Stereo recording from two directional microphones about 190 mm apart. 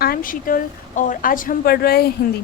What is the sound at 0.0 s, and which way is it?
A woman's voice, 50° left (ahead or behind).